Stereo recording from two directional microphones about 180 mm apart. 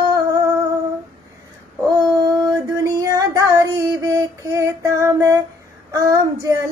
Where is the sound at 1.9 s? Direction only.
20° right (ahead or behind).